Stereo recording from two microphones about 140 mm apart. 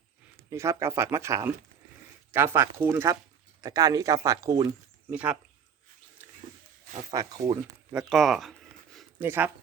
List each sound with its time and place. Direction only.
0.5 s speech: 20° right (ahead or behind)
5.1 s speech: 10° right (ahead or behind)
7.1 s speech: 25° right (ahead or behind)
7.9 s a sound: centre (ahead or behind)
9.1 s speech: 15° right (ahead or behind)